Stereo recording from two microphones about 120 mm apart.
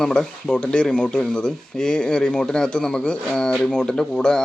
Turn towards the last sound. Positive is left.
turn(degrees=5)  # may be behind; listen again after turning